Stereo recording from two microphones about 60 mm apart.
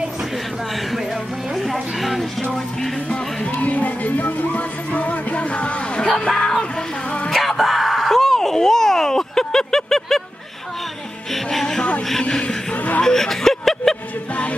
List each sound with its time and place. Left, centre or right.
1.7 s a woman's voice: centre
3.5 s music: left
6.1 s speech: centre
7.3 s a sound: centre
11.5 s speech: centre